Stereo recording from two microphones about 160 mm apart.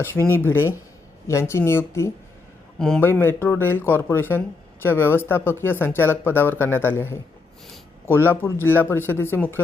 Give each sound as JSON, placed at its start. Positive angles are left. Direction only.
{"t": 0.3, "sound": "speech", "side_deg": 15}
{"t": 2.7, "sound": "a man's voice", "side_deg": 5}